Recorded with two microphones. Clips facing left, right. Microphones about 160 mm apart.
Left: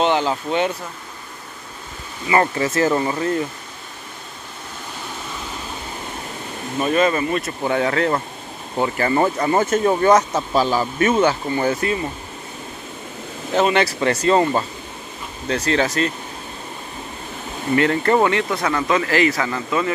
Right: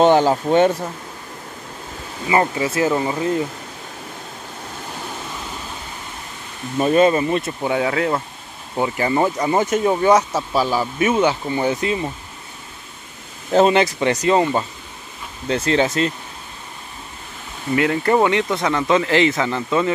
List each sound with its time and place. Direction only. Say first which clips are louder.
0.0 s speech: right 5 dB; 45° right (ahead or behind)
2.3 s speech: even; 10° right (ahead or behind)
6.8 s speech: right 3 dB; 30° right (ahead or behind)
7.6 s speech: left 2 dB; 10° right (ahead or behind)
13.5 s speech: right 3 dB; 30° right (ahead or behind); by 14.6 s 15° right (ahead or behind)
15.4 s speech: right 2 dB; 30° right (ahead or behind)
17.7 s speech: even; 10° right (ahead or behind)